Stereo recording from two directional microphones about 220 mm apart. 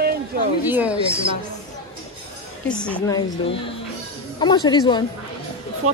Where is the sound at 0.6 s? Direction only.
10° right (ahead or behind).